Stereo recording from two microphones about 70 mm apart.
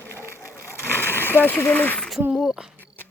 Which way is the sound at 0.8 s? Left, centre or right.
Left.